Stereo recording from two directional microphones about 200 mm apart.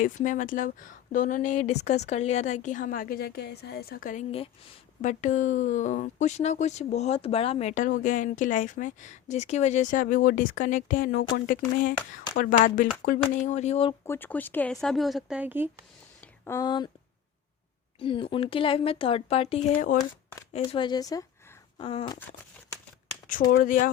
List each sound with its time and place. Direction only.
0.0 s a woman's voice: 40° left (ahead or behind)
14.1 s speech: 10° left (ahead or behind); by 15.7 s 10° right (ahead or behind)
16.2 s speech: 10° left (ahead or behind)
18.0 s speech: 25° left (ahead or behind)
23.6 s speech: 40° left (ahead or behind)